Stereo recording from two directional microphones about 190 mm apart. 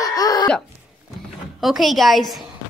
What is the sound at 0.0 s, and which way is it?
Cough, 20° left (ahead or behind).